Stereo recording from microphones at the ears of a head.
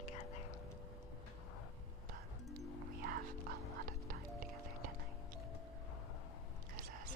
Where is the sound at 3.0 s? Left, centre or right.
Right.